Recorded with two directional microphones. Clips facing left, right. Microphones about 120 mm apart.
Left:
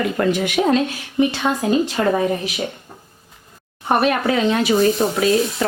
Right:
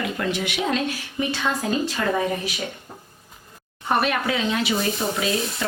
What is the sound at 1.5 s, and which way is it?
Speech, 25° left (ahead or behind).